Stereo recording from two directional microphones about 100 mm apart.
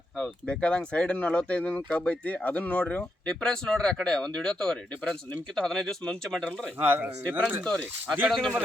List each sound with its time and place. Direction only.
0.2 s speech: 10° left (ahead or behind)
6.7 s speech: 20° right (ahead or behind)
7.6 s speech: 10° left (ahead or behind)